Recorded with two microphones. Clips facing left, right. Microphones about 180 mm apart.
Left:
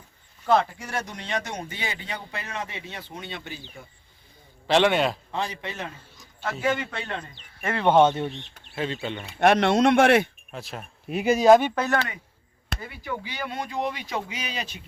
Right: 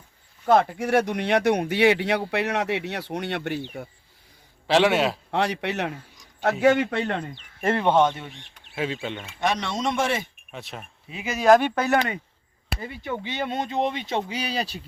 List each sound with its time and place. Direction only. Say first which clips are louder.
0.4 s speech: right 3 dB; 50° right (ahead or behind); by 3.8 s 70° right (ahead or behind)
4.6 s a man's voice: right 1 dB; 5° right (ahead or behind)
5.3 s speech: right 6 dB; 70° right (ahead or behind)
7.9 s speech: left 2 dB; 25° left (ahead or behind)
8.6 s speech: right 1 dB; 5° right (ahead or behind)
9.4 s speech: left 7 dB; 60° left (ahead or behind)
10.5 s a man's voice: right 3 dB; centre (ahead or behind)
11.2 s speech: left 8 dB; 40° left (ahead or behind)
11.6 s a man's voice: right 1 dB; centre (ahead or behind)
13.0 s speech: right 4 dB; 25° right (ahead or behind)